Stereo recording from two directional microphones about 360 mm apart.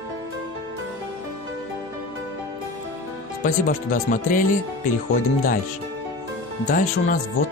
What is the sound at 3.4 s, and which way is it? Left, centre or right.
Speech, left.